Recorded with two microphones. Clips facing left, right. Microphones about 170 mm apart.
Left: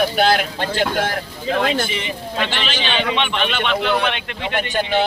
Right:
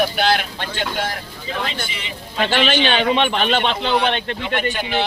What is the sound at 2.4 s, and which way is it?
A man's voice, 45° right (ahead or behind).